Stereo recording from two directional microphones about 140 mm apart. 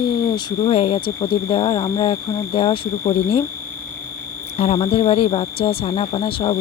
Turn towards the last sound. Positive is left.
turn(degrees=40)  # may be behind; listen again after turning